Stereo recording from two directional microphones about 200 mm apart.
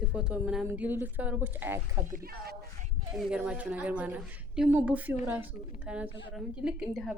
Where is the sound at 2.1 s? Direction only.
50° right (ahead or behind).